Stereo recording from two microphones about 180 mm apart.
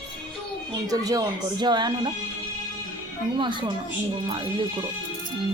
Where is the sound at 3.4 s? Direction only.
25° right (ahead or behind).